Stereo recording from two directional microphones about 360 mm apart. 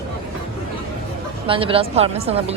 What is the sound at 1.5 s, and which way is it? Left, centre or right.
A man's voice, centre.